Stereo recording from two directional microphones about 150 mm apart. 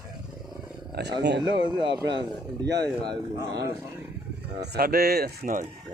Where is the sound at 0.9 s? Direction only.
90° right.